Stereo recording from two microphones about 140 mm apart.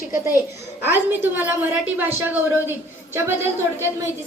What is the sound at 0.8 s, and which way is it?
A woman's voice, 15° right (ahead or behind).